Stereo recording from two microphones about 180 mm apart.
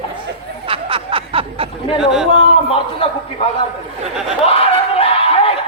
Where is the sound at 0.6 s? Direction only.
30° right (ahead or behind).